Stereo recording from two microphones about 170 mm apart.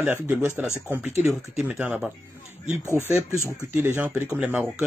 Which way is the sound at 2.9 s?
15° left (ahead or behind).